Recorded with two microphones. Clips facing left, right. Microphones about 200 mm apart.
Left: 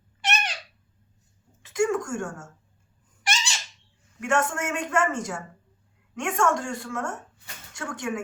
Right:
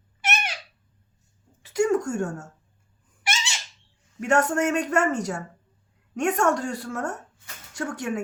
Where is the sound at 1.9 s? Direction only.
35° right (ahead or behind).